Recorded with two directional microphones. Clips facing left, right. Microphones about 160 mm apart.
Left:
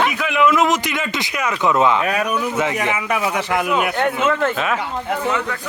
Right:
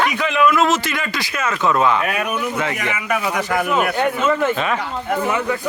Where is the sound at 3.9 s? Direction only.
5° right (ahead or behind).